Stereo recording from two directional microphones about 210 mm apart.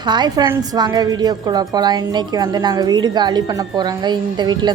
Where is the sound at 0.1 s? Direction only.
20° right (ahead or behind).